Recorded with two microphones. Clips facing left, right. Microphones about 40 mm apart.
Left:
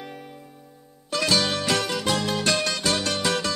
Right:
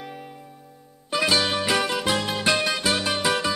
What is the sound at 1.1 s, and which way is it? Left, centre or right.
Music, centre.